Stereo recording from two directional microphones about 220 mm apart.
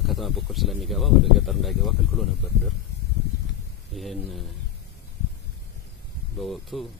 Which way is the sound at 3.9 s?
Centre (ahead or behind).